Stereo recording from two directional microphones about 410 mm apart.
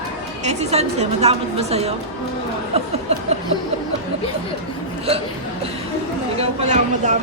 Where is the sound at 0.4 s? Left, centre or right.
Centre.